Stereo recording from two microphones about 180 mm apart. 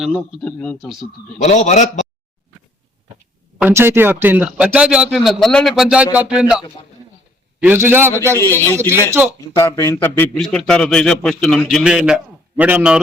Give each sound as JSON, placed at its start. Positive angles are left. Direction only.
{"t": 0.0, "sound": "a man's voice", "side_deg": 0}
{"t": 1.4, "sound": "a man's voice", "side_deg": 40}
{"t": 3.6, "sound": "a man's voice", "side_deg": -15}
{"t": 7.6, "sound": "a man's voice", "side_deg": -10}
{"t": 8.3, "sound": "speech", "side_deg": 15}
{"t": 8.9, "sound": "a man's voice", "side_deg": -15}
{"t": 9.6, "sound": "a man's voice", "side_deg": 15}